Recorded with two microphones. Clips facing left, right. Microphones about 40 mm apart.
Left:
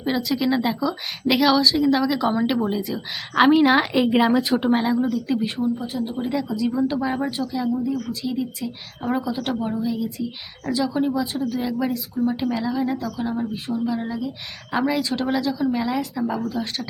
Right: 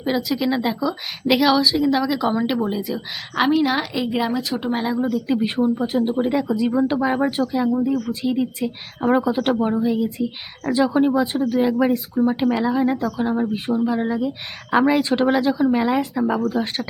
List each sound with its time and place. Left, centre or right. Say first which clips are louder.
0.0 s a woman's voice: right 1 dB; centre
3.3 s a woman's voice: left 3 dB; centre
4.2 s speech: left 4 dB; left
4.5 s a woman's voice: left 3 dB; centre
5.1 s speech: right 2 dB; centre
5.5 s speech: right 5 dB; right